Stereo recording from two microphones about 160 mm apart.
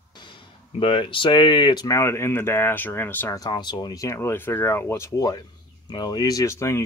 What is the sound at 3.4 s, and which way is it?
Speech, 25° left (ahead or behind).